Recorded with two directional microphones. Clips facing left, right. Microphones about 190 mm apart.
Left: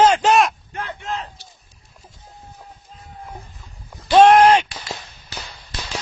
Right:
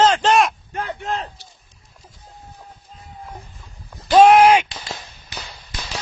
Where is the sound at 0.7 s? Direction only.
35° right (ahead or behind).